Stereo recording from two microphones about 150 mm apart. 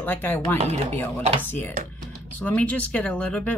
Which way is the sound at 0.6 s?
50° right (ahead or behind).